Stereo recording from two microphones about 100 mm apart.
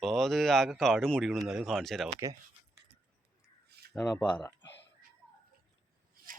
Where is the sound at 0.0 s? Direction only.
Centre (ahead or behind).